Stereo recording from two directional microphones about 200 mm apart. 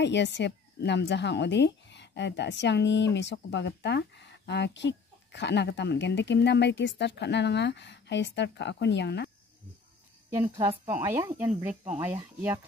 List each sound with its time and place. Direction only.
0.0 s a woman's voice: 60° left (ahead or behind)
10.3 s speech: 10° right (ahead or behind)